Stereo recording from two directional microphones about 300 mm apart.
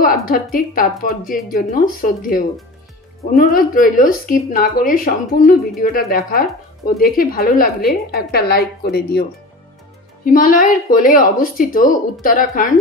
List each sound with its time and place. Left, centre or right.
0.0 s a woman's voice: left
10.2 s speech: left